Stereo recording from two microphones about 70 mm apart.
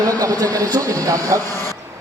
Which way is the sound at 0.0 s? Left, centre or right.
Right.